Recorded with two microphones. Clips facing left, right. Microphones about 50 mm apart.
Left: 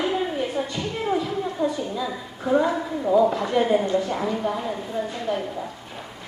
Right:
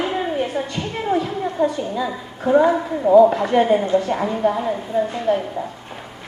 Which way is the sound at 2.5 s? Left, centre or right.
Right.